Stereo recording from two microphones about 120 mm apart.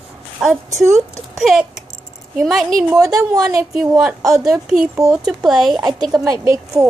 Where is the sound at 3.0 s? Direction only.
30° right (ahead or behind).